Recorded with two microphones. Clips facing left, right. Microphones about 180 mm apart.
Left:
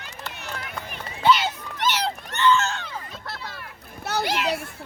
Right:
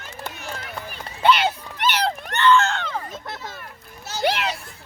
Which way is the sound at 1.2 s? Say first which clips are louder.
Right 2 dB; 60° right (ahead or behind).